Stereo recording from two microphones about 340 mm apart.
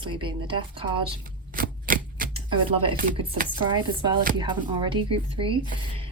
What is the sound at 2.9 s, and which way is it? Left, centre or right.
Chopping, right.